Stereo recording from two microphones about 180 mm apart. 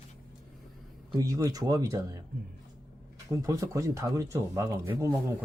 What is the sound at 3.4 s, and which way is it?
Speech, 20° right (ahead or behind).